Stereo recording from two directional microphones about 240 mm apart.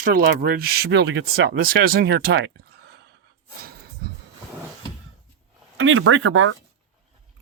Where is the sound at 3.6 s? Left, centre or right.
Right.